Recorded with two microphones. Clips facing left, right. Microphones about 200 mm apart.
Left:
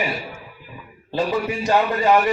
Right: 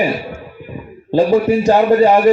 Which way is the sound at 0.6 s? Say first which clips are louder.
Right 11 dB; 50° right (ahead or behind).